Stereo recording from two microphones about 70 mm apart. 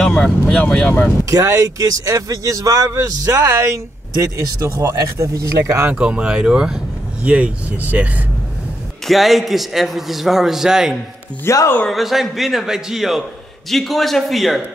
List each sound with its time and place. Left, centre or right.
0.0 s speech: centre
1.2 s a man's voice: right
5.9 s speech: centre
9.0 s a man's voice: centre
11.5 s speech: left
11.9 s a man's voice: centre